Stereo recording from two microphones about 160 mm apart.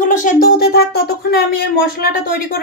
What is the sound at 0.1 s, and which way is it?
Speech, 60° left (ahead or behind).